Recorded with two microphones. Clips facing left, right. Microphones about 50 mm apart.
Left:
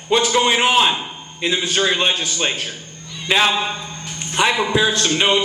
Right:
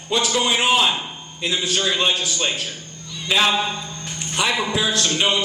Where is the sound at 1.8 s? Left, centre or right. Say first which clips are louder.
Left 1 dB; left.